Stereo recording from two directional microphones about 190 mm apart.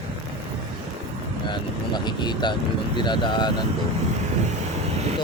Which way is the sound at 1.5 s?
25° left (ahead or behind).